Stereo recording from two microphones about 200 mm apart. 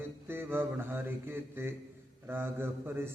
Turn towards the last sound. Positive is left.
turn(degrees=-10)  # may be behind; listen again after turning